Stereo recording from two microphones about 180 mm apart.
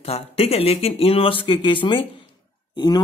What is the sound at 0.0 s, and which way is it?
Speech, 35° left (ahead or behind).